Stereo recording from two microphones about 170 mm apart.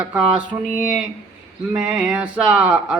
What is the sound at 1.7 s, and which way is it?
Mantra, 5° right (ahead or behind).